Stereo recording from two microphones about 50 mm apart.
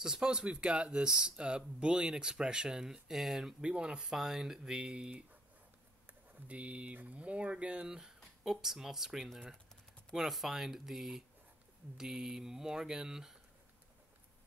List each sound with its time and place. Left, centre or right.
0.0 s speech: centre
3.6 s speech: centre
4.0 s speech: centre